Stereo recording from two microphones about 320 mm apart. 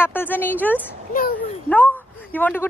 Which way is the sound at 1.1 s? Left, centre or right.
Left.